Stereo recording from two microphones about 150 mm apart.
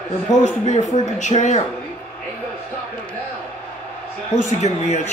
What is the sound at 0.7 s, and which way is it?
Speech, 50° left (ahead or behind).